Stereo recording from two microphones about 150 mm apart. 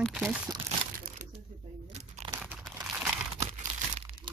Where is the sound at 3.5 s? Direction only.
45° right (ahead or behind).